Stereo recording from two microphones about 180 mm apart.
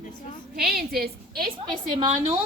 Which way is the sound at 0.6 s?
60° right (ahead or behind).